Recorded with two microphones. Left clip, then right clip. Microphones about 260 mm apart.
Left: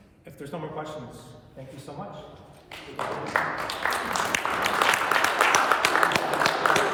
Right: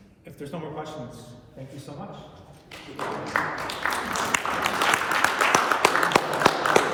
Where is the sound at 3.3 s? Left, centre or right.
Left.